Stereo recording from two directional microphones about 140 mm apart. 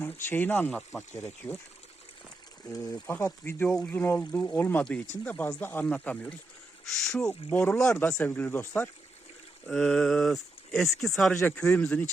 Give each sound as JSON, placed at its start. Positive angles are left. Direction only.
{"t": 0.0, "sound": "speech", "side_deg": 15}
{"t": 1.1, "sound": "speech", "side_deg": 20}
{"t": 2.6, "sound": "speech", "side_deg": 25}
{"t": 9.6, "sound": "speech", "side_deg": 5}